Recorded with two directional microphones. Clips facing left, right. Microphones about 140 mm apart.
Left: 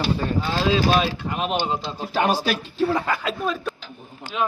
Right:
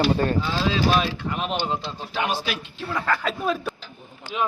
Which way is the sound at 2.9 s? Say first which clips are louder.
Left 1 dB; 20° left (ahead or behind).